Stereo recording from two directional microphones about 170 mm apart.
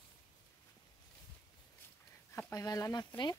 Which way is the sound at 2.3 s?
20° left (ahead or behind).